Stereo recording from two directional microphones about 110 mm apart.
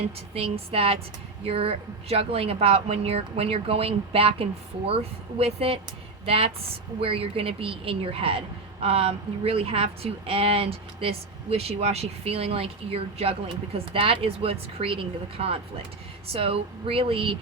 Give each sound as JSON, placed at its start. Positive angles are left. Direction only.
{"t": 0.3, "sound": "a woman's voice", "side_deg": -65}